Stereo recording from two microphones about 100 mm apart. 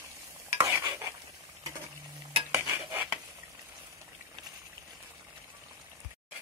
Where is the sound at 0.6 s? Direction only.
25° right (ahead or behind).